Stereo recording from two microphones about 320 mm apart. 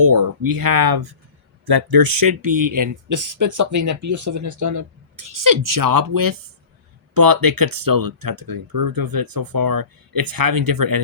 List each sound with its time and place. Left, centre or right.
0.1 s speech: right